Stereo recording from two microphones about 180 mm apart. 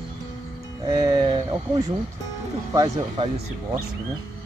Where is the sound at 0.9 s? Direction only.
25° right (ahead or behind).